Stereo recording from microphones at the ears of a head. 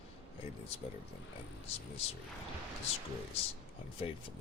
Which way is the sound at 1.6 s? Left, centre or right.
Left.